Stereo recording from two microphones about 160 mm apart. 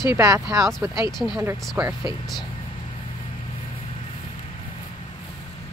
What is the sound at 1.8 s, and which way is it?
Speech, 15° right (ahead or behind).